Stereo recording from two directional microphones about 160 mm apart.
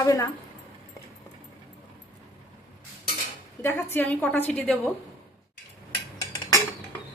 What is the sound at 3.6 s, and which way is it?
A woman's voice, 15° left (ahead or behind).